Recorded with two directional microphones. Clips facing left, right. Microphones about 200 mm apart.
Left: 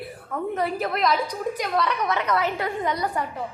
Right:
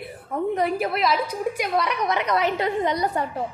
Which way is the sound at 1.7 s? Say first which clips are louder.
Even; 15° right (ahead or behind).